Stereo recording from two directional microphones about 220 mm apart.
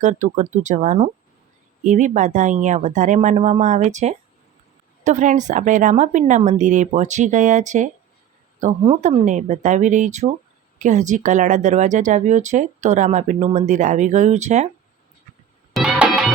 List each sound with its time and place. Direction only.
0.0 s speech: 35° right (ahead or behind)
15.7 s music: centre (ahead or behind)